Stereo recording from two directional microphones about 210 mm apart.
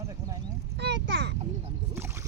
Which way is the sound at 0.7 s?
55° right (ahead or behind).